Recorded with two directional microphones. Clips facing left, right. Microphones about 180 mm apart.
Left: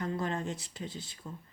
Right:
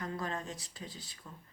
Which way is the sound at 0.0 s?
25° left (ahead or behind).